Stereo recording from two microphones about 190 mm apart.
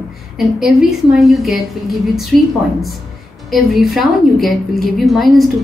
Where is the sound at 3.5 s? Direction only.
Centre (ahead or behind).